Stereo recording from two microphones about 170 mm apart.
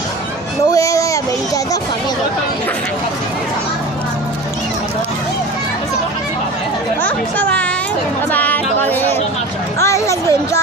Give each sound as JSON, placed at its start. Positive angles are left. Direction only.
{"t": 0.7, "sound": "a sound", "side_deg": 20}
{"t": 7.0, "sound": "chatter", "side_deg": 10}
{"t": 8.3, "sound": "music", "side_deg": 10}